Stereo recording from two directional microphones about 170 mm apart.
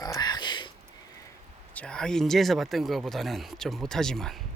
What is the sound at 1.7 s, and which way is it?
Speech, 5° left (ahead or behind).